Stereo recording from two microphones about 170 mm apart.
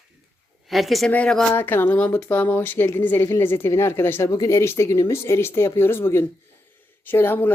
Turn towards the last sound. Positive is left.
turn(degrees=10)  # may be behind; listen again after turning